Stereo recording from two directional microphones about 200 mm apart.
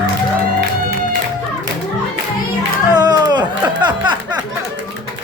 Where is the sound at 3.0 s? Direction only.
20° right (ahead or behind).